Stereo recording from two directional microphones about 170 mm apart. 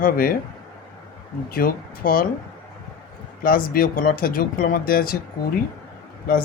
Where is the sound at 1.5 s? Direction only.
60° left (ahead or behind).